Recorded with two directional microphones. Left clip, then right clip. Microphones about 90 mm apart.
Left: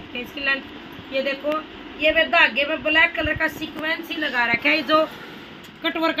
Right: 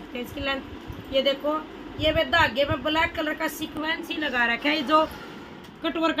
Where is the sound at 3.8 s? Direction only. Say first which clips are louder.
Left 3 dB; 35° right (ahead or behind).